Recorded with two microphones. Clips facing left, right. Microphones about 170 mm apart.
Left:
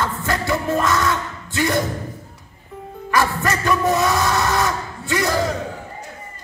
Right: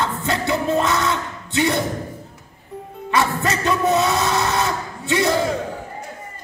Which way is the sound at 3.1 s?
25° right (ahead or behind).